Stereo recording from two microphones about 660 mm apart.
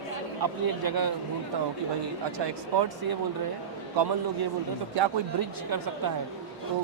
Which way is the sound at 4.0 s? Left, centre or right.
Right.